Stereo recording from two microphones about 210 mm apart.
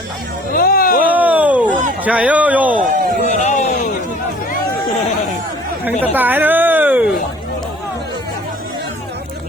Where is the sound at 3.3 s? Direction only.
35° left (ahead or behind).